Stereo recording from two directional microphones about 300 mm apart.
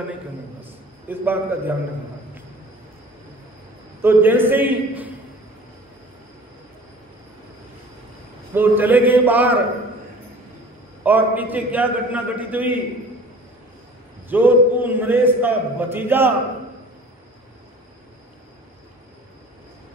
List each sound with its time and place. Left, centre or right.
0.6 s a sound: centre
4.0 s a man's voice: centre
8.5 s a man's voice: centre
11.1 s a man's voice: centre
14.3 s a man's voice: centre